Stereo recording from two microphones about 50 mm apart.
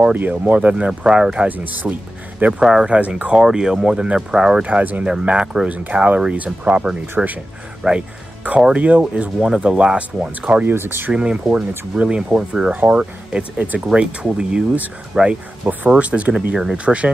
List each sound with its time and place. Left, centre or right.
0.1 s speech: right; by 1.5 s centre
1.5 s speech: right
2.6 s speech: centre
2.9 s speech: right
4.6 s speech: right
5.0 s speech: centre
5.7 s speech: right
8.7 s speech: right
10.6 s speech: right
11.1 s speech: centre
13.7 s speech: centre